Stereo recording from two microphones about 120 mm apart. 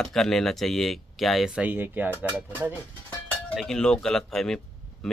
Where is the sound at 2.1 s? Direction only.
15° left (ahead or behind).